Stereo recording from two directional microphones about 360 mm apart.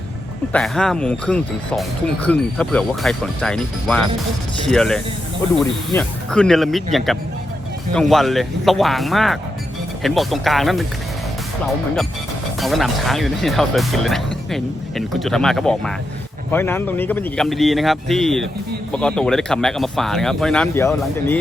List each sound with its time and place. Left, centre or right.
0.5 s speech: centre
12.5 s speech: centre